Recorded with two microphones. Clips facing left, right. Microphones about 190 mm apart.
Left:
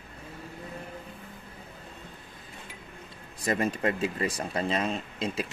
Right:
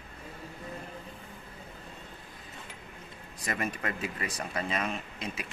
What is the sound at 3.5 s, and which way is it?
Speech, 30° left (ahead or behind).